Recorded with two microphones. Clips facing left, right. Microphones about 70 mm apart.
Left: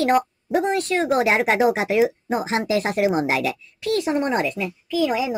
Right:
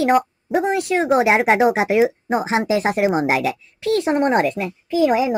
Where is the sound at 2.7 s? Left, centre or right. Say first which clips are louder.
Right 1 dB; right.